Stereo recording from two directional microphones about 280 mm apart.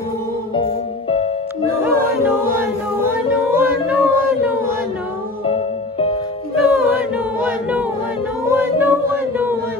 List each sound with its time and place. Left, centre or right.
0.6 s music: centre
1.8 s music: centre
2.6 s a sound: centre
5.5 s music: centre
6.7 s chant: centre
8.5 s a sound: centre